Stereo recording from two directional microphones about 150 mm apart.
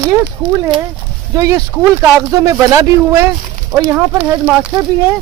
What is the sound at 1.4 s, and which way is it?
Speech, 20° right (ahead or behind).